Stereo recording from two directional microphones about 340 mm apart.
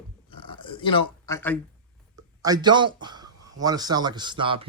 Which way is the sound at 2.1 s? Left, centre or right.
Centre.